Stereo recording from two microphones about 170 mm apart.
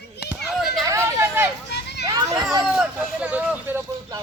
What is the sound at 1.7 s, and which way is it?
Children playing, 80° left.